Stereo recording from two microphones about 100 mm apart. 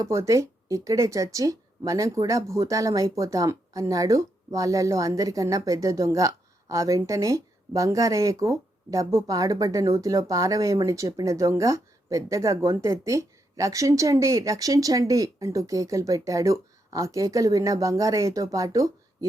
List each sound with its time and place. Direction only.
0.0 s speech: 30° right (ahead or behind)